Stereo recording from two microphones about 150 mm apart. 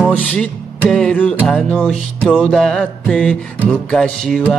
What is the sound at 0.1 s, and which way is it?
Music, 10° left (ahead or behind).